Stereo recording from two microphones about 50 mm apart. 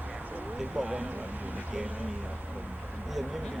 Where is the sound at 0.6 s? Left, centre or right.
Right.